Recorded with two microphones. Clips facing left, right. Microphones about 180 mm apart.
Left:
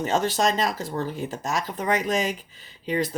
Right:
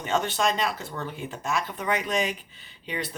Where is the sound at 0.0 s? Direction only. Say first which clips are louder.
Left 3 dB; 40° left (ahead or behind).